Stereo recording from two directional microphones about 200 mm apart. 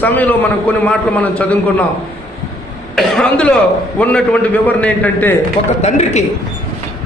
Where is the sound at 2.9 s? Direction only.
5° left (ahead or behind).